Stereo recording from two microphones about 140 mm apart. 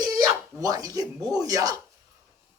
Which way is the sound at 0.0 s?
25° right (ahead or behind).